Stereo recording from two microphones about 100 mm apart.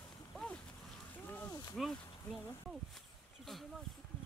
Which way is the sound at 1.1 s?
15° left (ahead or behind).